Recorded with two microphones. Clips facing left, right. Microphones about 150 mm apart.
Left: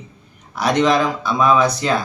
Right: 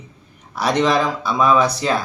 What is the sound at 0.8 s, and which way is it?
Speech, 5° right (ahead or behind).